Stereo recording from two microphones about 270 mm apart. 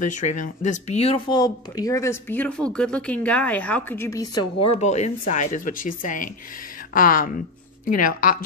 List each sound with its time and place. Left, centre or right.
0.0 s speech: left; by 4.5 s centre
4.6 s speech: left